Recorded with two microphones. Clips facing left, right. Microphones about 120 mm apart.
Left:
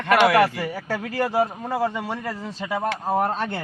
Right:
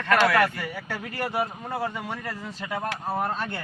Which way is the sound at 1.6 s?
90° left.